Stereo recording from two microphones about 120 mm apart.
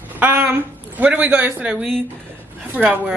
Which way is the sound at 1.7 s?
Centre (ahead or behind).